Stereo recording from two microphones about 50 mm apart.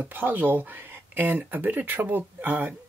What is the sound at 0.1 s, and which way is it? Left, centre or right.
Speech, right.